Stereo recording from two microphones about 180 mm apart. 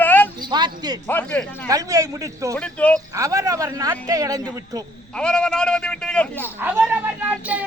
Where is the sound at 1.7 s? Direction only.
20° right (ahead or behind).